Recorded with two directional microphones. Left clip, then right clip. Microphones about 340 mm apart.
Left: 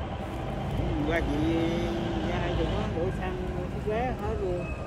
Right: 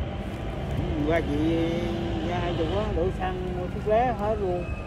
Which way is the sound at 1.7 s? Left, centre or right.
Centre.